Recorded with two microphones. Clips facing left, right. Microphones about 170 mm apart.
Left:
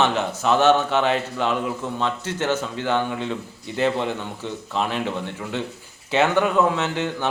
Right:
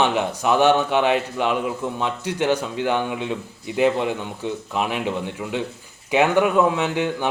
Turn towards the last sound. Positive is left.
turn(degrees=-10)  # may be behind; listen again after turning